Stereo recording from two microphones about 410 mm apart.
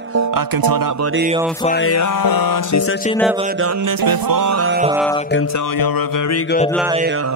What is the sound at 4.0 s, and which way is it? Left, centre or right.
Music, right.